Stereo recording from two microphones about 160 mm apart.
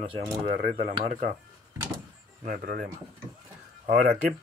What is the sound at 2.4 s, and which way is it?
Speech, 70° right (ahead or behind).